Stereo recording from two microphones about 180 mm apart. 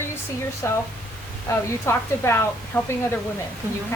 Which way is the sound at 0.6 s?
15° left (ahead or behind).